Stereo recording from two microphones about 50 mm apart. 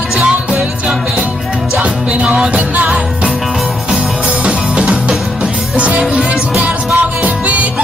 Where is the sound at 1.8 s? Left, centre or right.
Right.